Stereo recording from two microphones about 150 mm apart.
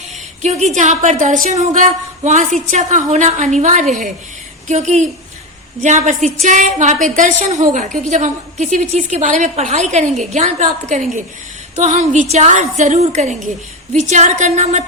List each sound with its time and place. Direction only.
0.4 s a woman's voice: 50° right (ahead or behind)